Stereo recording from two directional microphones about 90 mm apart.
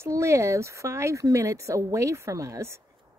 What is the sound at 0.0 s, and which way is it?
Speech, 30° right (ahead or behind).